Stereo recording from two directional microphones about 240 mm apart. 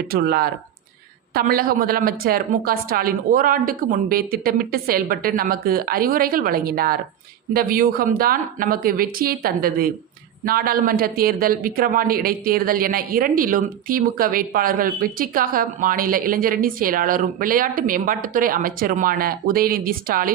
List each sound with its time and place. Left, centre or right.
0.1 s speech: right